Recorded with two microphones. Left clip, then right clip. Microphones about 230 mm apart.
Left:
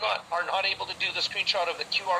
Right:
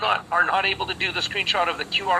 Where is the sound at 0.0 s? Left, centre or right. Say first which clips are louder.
Right 7 dB; centre.